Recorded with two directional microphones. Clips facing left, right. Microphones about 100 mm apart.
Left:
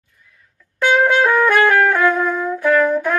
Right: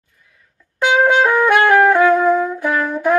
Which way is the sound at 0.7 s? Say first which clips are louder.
Right 1 dB; 20° right (ahead or behind).